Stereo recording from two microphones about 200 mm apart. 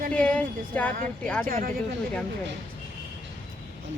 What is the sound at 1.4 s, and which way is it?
Speech, 45° right (ahead or behind).